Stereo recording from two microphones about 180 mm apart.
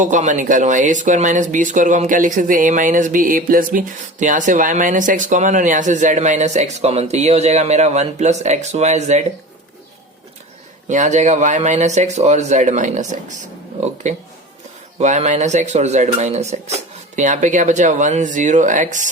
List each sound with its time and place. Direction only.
0.0 s speech: 45° right (ahead or behind)
10.8 s speech: 40° right (ahead or behind)